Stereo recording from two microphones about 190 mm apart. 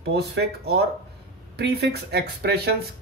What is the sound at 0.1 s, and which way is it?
Speech, 60° right (ahead or behind).